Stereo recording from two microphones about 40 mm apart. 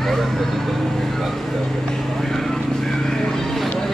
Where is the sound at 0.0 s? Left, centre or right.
Centre.